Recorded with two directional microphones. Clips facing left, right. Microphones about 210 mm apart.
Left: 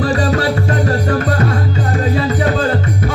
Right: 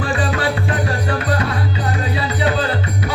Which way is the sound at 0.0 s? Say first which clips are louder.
Left 5 dB; 40° left (ahead or behind).